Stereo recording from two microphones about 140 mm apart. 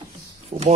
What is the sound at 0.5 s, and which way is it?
Speech, 55° right (ahead or behind).